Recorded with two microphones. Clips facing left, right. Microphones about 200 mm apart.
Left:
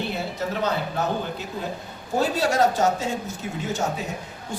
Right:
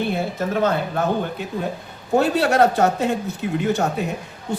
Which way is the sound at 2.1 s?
60° right (ahead or behind).